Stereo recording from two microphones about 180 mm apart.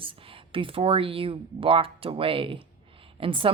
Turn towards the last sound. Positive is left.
turn(degrees=-30)  # may be behind; listen again after turning